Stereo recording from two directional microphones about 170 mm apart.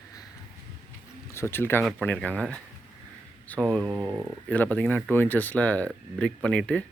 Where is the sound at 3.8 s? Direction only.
10° right (ahead or behind).